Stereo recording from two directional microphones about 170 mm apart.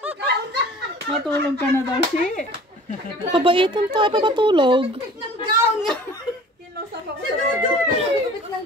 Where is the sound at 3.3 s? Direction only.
30° right (ahead or behind).